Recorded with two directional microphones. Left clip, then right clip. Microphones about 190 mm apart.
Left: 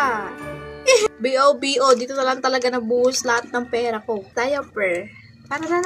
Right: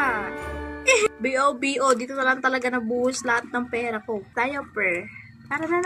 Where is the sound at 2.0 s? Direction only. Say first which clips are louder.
Left 2 dB; 25° right (ahead or behind).